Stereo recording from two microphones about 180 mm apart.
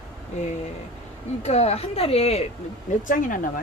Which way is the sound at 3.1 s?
50° left (ahead or behind).